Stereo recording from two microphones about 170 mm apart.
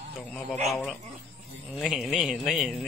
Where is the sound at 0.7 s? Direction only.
Centre (ahead or behind).